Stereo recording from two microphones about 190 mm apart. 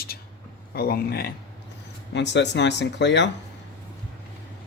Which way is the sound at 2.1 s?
65° left (ahead or behind).